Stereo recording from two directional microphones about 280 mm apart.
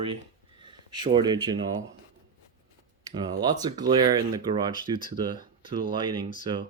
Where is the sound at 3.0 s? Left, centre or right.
Centre.